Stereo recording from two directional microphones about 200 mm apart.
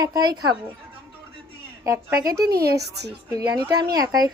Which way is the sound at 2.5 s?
55° right (ahead or behind).